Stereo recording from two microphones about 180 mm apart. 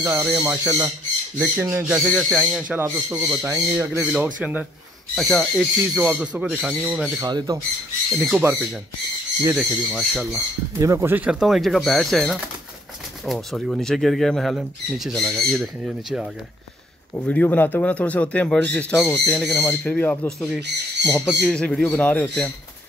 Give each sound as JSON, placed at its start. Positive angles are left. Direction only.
{"t": 0.0, "sound": "speech", "side_deg": -10}
{"t": 2.8, "sound": "speech", "side_deg": -15}
{"t": 5.1, "sound": "speech", "side_deg": 5}
{"t": 7.2, "sound": "speech", "side_deg": -20}
{"t": 9.6, "sound": "speech", "side_deg": 0}
{"t": 10.8, "sound": "speech", "side_deg": -15}